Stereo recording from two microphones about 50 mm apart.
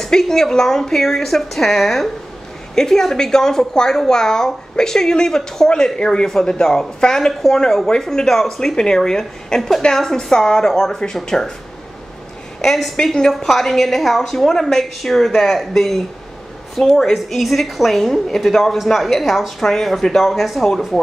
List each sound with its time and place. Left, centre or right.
0.0 s a woman's voice: centre
12.6 s a woman's voice: centre
12.9 s a woman's voice: centre
13.3 s a woman's voice: centre